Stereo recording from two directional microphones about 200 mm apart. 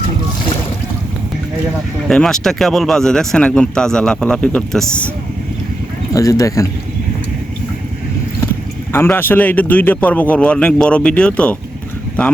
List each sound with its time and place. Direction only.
2.0 s speech: centre (ahead or behind)
6.1 s a man's voice: 15° left (ahead or behind)
8.9 s a man's voice: 10° left (ahead or behind)